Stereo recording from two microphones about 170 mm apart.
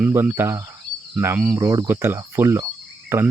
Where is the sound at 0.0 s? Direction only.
10° right (ahead or behind).